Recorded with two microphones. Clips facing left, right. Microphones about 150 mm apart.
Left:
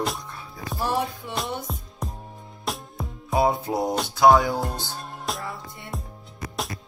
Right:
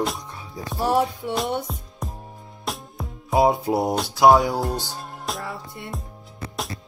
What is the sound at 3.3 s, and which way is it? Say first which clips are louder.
Music: right 3 dB; 10° right (ahead or behind).